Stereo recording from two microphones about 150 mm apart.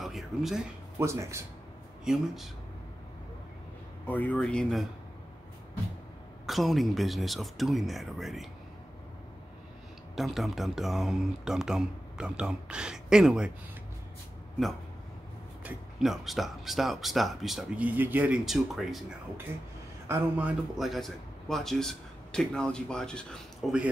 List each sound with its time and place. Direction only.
0.0 s a sound: centre (ahead or behind)
0.9 s speech: 20° right (ahead or behind)
2.0 s speech: centre (ahead or behind)
4.1 s speech: 10° left (ahead or behind)
6.4 s speech: centre (ahead or behind)
10.1 s speech: centre (ahead or behind)
15.6 s speech: centre (ahead or behind)
20.1 s speech: 10° right (ahead or behind)